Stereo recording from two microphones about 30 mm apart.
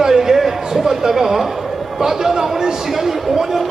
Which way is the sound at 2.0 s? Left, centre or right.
Centre.